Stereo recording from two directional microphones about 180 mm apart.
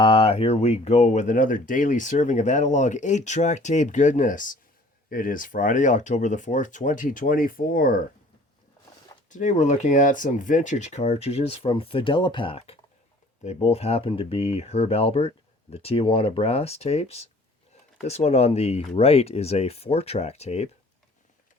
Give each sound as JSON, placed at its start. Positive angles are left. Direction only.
{"t": 0.0, "sound": "speech", "side_deg": 30}
{"t": 9.3, "sound": "speech", "side_deg": 45}